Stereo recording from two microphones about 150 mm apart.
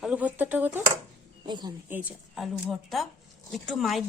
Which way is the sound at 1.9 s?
10° right (ahead or behind).